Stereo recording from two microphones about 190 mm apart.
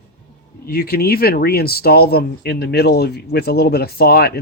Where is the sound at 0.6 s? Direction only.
55° left (ahead or behind).